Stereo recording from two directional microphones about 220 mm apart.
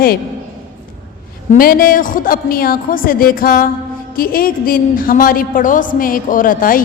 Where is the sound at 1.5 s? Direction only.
40° left (ahead or behind).